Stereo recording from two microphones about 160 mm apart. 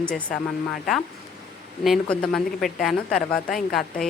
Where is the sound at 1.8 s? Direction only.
Centre (ahead or behind).